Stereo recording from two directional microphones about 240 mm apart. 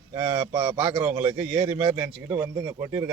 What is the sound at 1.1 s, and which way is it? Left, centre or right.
Speech, centre.